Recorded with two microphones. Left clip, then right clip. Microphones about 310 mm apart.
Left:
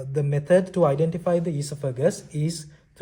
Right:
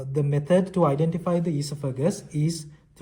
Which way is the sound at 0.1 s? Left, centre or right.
Left.